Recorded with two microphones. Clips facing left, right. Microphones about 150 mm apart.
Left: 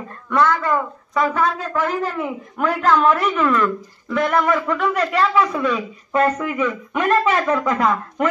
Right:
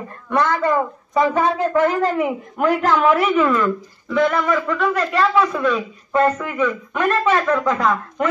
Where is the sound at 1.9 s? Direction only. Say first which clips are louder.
Right 4 dB; 85° right.